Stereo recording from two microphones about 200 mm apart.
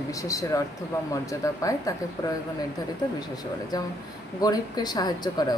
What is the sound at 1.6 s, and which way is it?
Speech, 15° left (ahead or behind).